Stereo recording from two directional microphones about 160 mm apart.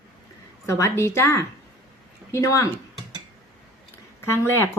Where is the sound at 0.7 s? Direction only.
20° left (ahead or behind).